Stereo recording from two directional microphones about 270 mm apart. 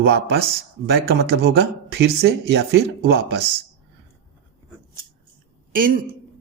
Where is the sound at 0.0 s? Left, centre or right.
Right.